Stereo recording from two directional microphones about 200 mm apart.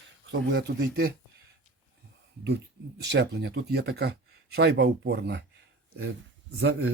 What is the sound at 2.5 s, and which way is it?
Speech, 55° right (ahead or behind).